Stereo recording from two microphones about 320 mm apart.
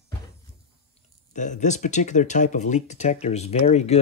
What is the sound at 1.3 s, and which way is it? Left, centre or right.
Speech, left.